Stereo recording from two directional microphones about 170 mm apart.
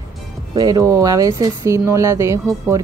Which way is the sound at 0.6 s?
20° right (ahead or behind).